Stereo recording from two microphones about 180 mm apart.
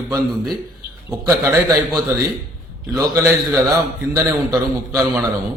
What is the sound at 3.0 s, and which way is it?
A man's voice, 15° right (ahead or behind).